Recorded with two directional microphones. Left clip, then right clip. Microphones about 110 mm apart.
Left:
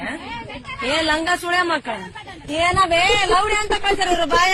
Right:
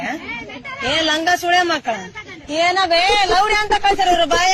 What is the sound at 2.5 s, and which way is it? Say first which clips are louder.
Speech: right 1 dB; 35° left (ahead or behind).